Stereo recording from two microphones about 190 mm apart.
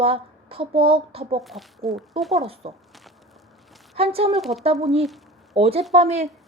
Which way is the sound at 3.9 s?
30° right (ahead or behind).